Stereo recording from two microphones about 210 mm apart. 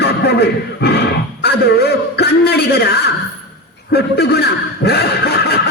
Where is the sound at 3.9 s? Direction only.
50° left (ahead or behind).